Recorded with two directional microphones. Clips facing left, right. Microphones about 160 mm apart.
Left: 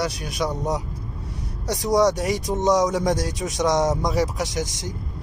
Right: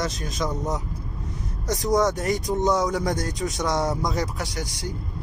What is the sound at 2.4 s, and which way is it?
Speech, 20° left (ahead or behind).